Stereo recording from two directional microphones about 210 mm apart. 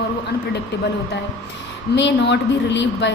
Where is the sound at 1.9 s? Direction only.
60° left (ahead or behind).